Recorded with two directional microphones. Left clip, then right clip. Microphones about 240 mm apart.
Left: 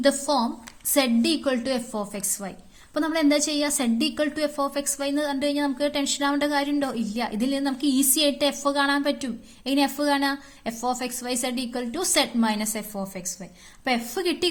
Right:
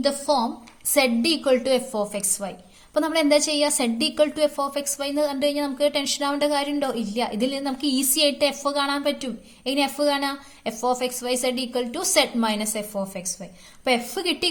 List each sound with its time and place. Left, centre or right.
0.0 s a woman's voice: left